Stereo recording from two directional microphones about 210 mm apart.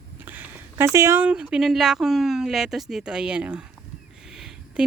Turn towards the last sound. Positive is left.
turn(degrees=0)  # may be behind; listen again after turning